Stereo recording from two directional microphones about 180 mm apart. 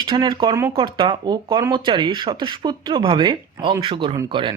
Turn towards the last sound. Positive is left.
turn(degrees=-25)  # may be behind; listen again after turning